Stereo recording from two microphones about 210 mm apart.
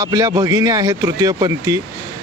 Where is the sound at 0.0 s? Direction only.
15° right (ahead or behind).